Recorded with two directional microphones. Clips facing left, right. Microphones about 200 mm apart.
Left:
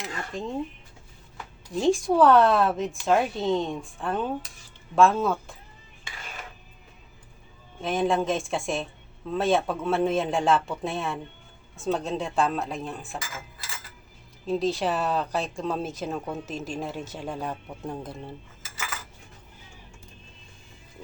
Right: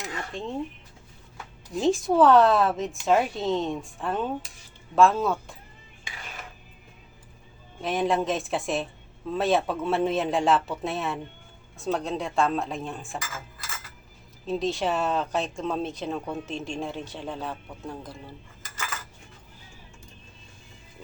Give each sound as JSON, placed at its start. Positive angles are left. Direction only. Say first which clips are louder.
{"t": 0.0, "sound": "a sound", "louder": "left 1 dB", "side_deg": 0}
{"t": 1.7, "sound": "speech", "louder": "even", "side_deg": 0}
{"t": 7.8, "sound": "speech", "louder": "left 1 dB", "side_deg": 0}
{"t": 14.4, "sound": "speech", "louder": "left 1 dB", "side_deg": 0}